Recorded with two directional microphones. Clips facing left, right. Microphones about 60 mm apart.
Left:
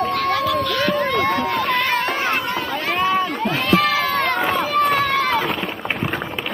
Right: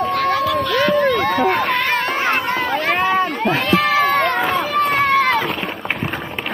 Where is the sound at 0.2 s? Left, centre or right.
Centre.